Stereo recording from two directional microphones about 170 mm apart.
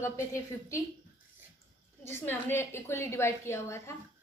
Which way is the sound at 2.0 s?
15° left (ahead or behind).